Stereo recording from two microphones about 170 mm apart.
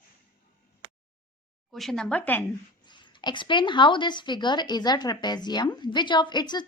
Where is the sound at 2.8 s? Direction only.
25° left (ahead or behind).